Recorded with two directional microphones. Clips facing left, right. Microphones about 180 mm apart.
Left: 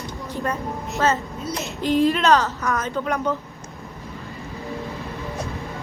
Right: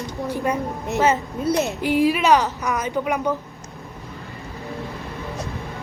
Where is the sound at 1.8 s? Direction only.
10° right (ahead or behind).